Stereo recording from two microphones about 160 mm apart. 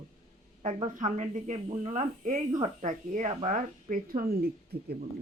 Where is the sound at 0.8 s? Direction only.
50° right (ahead or behind).